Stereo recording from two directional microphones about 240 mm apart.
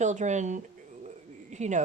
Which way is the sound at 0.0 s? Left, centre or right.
Right.